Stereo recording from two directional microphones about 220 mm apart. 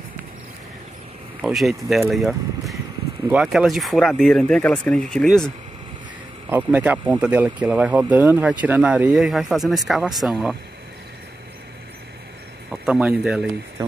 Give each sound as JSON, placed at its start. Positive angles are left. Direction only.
{"t": 1.4, "sound": "speech", "side_deg": 0}
{"t": 6.5, "sound": "speech", "side_deg": -5}
{"t": 12.8, "sound": "speech", "side_deg": -5}